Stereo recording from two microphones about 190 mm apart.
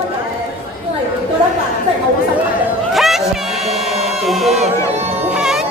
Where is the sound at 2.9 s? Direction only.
Centre (ahead or behind).